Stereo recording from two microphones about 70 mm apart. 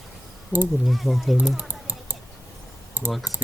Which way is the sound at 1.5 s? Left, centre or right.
Right.